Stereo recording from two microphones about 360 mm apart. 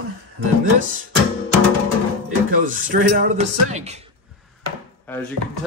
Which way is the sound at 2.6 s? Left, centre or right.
Right.